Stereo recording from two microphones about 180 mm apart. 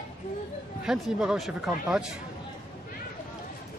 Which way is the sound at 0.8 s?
5° right (ahead or behind).